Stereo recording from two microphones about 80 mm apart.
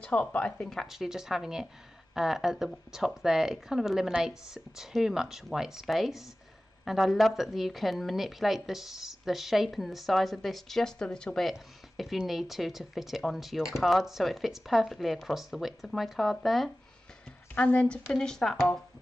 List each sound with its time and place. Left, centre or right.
0.0 s speech: centre
0.5 s speech: centre
17.6 s a woman's voice: centre